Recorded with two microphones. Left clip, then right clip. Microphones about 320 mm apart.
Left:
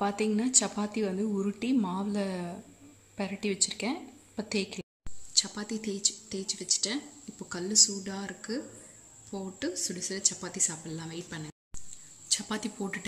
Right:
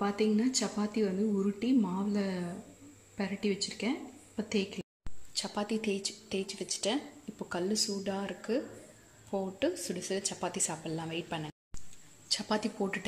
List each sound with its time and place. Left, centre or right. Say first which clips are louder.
0.0 s a woman's voice: left 1 dB; centre
5.4 s a woman's voice: even; centre